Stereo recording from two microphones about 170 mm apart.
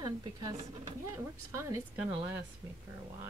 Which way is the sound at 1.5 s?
20° right (ahead or behind).